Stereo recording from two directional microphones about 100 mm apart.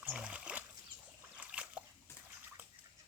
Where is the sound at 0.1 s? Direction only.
10° right (ahead or behind).